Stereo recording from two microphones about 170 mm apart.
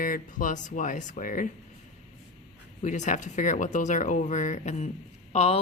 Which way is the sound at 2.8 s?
45° left (ahead or behind).